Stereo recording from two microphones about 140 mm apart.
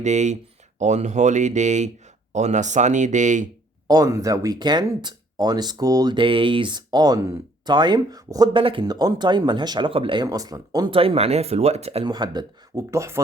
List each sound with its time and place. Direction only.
0.0 s speech: 55° right (ahead or behind)
3.8 s speech: 25° right (ahead or behind)
8.5 s speech: 35° right (ahead or behind)
10.2 s speech: 25° right (ahead or behind)
10.9 s speech: 45° right (ahead or behind)
12.0 s speech: 30° right (ahead or behind)
12.9 s speech: 20° right (ahead or behind)